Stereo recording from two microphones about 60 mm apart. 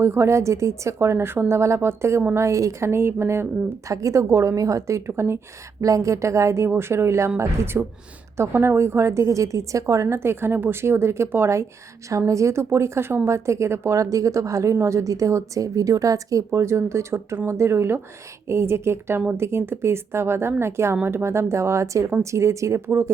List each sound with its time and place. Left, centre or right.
0.0 s a woman's voice: right
3.8 s a woman's voice: right
5.8 s a woman's voice: right
6.7 s a woman's voice: right
10.2 s speech: right
12.0 s a woman's voice: right
13.9 s a woman's voice: right
16.5 s a woman's voice: right
22.9 s speech: right